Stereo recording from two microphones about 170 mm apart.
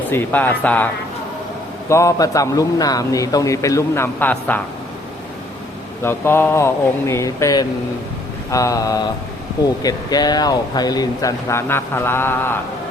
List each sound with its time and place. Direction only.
0.1 s speech: 10° left (ahead or behind)
1.9 s a man's voice: 15° left (ahead or behind)
6.0 s a man's voice: 15° left (ahead or behind)